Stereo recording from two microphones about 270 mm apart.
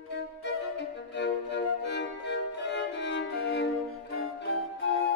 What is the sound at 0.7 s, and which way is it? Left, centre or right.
Music, left.